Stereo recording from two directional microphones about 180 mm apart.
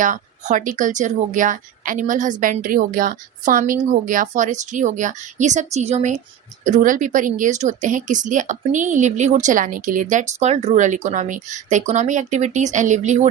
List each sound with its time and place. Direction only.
0.0 s speech: 45° right (ahead or behind)